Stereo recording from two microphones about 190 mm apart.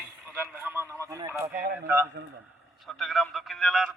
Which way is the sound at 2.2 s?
60° right (ahead or behind).